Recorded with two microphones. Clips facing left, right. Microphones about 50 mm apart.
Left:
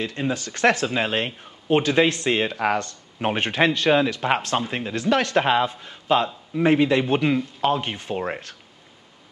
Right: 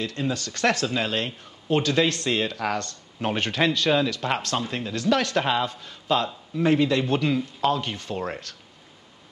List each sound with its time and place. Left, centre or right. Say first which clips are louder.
0.0 s speech: left 2 dB; centre